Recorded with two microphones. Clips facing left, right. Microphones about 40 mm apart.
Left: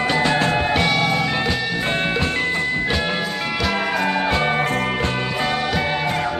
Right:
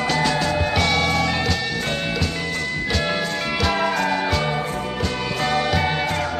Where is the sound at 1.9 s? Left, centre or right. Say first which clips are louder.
Left 4 dB; left.